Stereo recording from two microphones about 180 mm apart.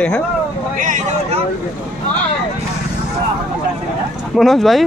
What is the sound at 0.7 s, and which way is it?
Speech, 45° right (ahead or behind).